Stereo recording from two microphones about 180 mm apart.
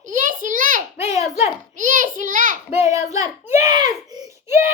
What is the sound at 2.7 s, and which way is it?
A child's voice, 15° right (ahead or behind).